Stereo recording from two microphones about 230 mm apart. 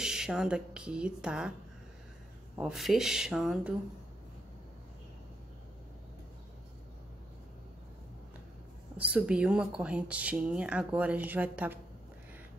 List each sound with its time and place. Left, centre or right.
0.0 s speech: centre
2.5 s speech: centre
8.9 s speech: centre